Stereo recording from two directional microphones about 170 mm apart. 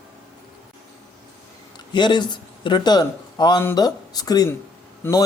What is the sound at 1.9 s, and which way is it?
A man's voice, 25° left (ahead or behind).